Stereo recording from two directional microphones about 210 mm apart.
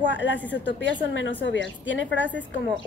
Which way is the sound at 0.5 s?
60° left (ahead or behind).